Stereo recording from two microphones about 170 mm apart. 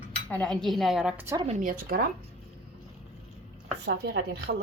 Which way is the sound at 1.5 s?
55° right (ahead or behind).